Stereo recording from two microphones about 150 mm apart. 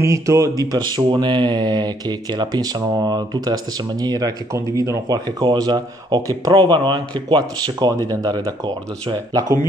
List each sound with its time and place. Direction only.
0.0 s speech: 20° right (ahead or behind)